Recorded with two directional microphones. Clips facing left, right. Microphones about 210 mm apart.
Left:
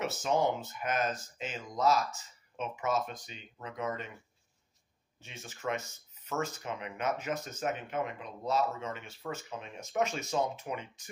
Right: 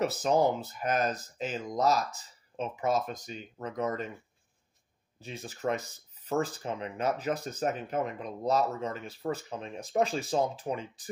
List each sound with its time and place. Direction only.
0.0 s speech: 35° right (ahead or behind)
5.2 s speech: 35° right (ahead or behind)